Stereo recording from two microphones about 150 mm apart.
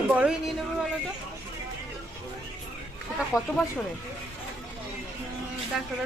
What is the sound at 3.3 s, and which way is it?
Speech, 20° left (ahead or behind).